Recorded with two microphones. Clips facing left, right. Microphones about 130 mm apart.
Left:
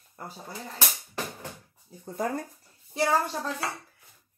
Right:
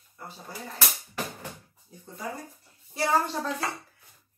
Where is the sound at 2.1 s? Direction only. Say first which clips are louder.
Left 7 dB; 55° left (ahead or behind).